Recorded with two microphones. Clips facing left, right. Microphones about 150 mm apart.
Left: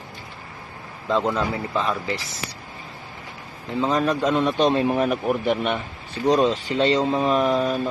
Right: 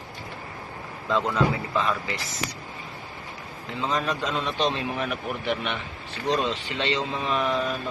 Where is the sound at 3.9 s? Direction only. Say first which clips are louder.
Left 8 dB; 45° left (ahead or behind).